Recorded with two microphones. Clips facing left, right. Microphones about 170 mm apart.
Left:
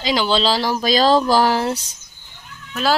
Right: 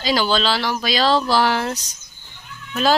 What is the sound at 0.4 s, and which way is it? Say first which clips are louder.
Speech: left 3 dB; 35° left (ahead or behind).